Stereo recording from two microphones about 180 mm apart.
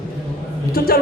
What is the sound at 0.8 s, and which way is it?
Speech, 55° left (ahead or behind).